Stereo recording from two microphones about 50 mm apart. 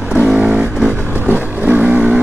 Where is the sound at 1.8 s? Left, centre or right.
Right.